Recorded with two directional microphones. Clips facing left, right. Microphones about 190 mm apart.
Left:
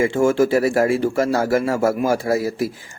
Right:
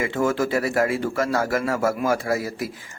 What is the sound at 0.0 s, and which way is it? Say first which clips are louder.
Speech: left 6 dB; 30° left (ahead or behind).